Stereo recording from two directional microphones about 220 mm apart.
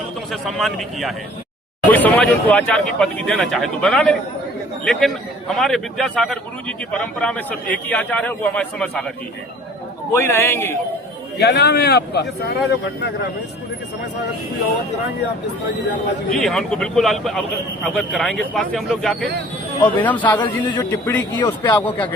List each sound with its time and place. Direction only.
0.3 s a man's voice: centre (ahead or behind)
10.2 s speech: 10° left (ahead or behind)
11.3 s speech: 45° left (ahead or behind)
16.4 s a man's voice: centre (ahead or behind)
20.4 s a man's voice: 20° left (ahead or behind)